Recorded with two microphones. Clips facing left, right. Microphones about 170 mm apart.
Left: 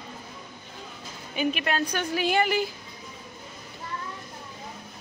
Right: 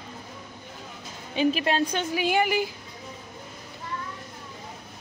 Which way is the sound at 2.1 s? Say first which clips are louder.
Left 1 dB; 15° right (ahead or behind).